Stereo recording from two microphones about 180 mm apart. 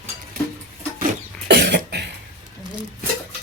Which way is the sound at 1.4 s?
70° right (ahead or behind).